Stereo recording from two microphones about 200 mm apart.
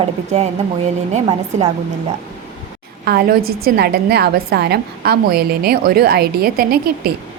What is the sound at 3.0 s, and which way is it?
A woman's voice, 50° right (ahead or behind).